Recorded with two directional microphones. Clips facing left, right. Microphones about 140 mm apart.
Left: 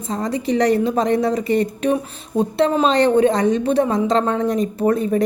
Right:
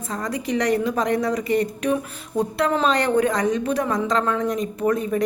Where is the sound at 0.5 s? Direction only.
30° left (ahead or behind).